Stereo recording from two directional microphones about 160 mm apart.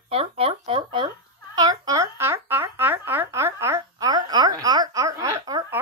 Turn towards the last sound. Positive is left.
turn(degrees=-20)  # may be behind; listen again after turning